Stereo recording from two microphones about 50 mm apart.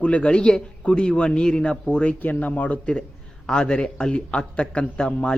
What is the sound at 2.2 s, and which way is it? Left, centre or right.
Speech, left.